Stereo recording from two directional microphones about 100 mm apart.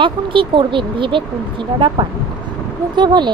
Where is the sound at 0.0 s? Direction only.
55° right (ahead or behind).